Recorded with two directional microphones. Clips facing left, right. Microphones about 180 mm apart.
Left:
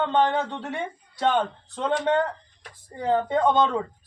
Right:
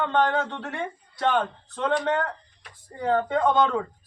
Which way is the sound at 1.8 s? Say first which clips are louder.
Left 1 dB; 20° left (ahead or behind).